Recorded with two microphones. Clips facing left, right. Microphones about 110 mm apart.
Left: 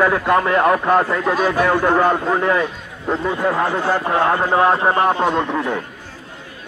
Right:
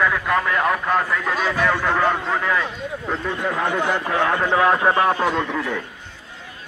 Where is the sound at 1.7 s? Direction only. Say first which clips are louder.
Left 5 dB; 15° left (ahead or behind).